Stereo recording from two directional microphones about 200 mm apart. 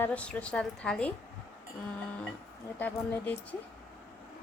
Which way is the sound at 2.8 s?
5° left (ahead or behind).